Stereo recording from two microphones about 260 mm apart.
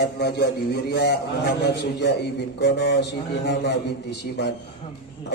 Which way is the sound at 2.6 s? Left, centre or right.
Left.